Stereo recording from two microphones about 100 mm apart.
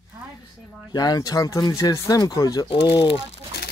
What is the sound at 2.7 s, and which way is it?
Speech, 55° left (ahead or behind).